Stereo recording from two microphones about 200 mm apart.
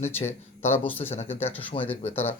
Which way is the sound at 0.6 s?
10° left (ahead or behind).